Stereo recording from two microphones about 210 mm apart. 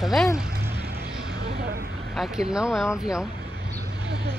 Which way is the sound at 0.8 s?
50° right (ahead or behind).